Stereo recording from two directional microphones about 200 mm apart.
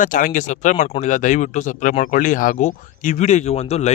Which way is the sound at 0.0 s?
40° left (ahead or behind).